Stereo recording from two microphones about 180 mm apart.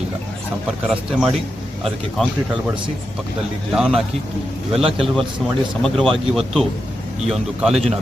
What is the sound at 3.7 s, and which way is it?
Speech, 5° right (ahead or behind).